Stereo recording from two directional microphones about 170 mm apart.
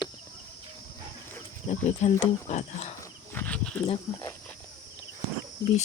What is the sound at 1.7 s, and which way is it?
Speech, 40° left (ahead or behind).